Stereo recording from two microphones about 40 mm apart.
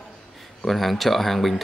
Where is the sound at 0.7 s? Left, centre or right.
Centre.